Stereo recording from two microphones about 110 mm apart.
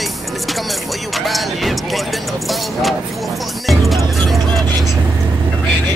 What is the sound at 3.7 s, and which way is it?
Music, centre (ahead or behind).